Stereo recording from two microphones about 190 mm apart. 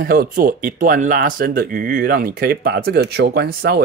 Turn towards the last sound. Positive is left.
turn(degrees=-55)  # may be behind; listen again after turning